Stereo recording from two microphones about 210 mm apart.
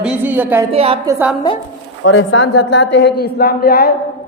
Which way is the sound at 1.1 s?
10° right (ahead or behind).